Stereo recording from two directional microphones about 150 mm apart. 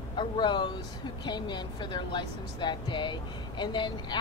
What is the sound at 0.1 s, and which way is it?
A woman's voice, 30° left (ahead or behind).